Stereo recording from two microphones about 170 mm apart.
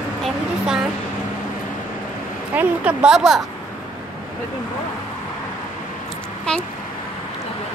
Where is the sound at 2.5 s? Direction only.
10° right (ahead or behind).